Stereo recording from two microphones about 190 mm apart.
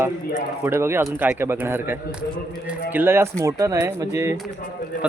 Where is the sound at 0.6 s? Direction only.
15° right (ahead or behind).